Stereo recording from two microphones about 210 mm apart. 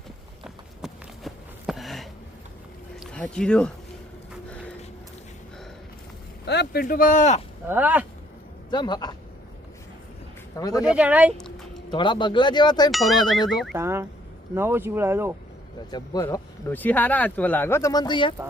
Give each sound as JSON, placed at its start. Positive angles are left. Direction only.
{"t": 0.8, "sound": "a sound", "side_deg": 0}
{"t": 6.4, "sound": "speech", "side_deg": 50}
{"t": 7.7, "sound": "speech", "side_deg": -10}
{"t": 8.7, "sound": "speech", "side_deg": 20}
{"t": 10.6, "sound": "speech", "side_deg": 15}
{"t": 10.8, "sound": "speech", "side_deg": -5}
{"t": 11.9, "sound": "speech", "side_deg": 20}
{"t": 12.9, "sound": "ding", "side_deg": 0}
{"t": 13.7, "sound": "speech", "side_deg": -10}
{"t": 15.9, "sound": "speech", "side_deg": 20}